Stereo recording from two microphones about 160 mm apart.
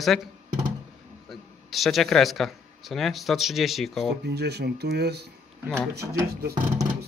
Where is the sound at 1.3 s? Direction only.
Centre (ahead or behind).